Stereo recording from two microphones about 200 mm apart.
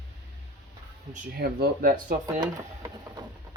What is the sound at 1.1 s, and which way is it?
Speech, 45° right (ahead or behind).